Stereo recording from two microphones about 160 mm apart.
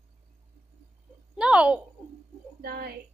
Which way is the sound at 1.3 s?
5° right (ahead or behind).